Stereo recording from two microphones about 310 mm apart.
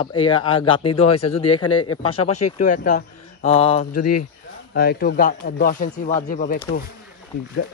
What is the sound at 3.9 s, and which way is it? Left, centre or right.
Speech, left.